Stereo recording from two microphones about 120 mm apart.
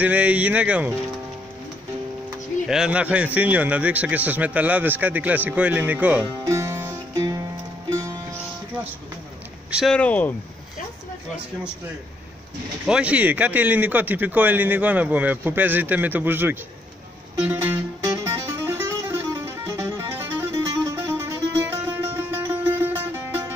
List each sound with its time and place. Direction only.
0.0 s speech: 10° right (ahead or behind)
2.7 s speech: 10° right (ahead or behind)
6.4 s music: 25° right (ahead or behind)
9.8 s speech: 10° left (ahead or behind)
12.8 s speech: 10° right (ahead or behind)
17.4 s music: 20° right (ahead or behind)